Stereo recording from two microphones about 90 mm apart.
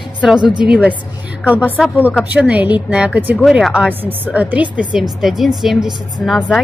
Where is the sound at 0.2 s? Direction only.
5° right (ahead or behind).